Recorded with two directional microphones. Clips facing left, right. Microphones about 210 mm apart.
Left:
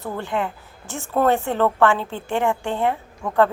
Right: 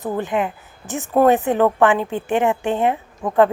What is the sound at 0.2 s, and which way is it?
A woman's voice, 20° right (ahead or behind).